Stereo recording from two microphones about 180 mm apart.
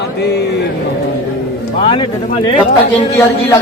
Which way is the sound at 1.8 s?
30° left (ahead or behind).